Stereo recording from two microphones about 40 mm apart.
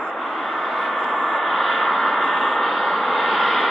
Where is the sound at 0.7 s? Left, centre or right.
Centre.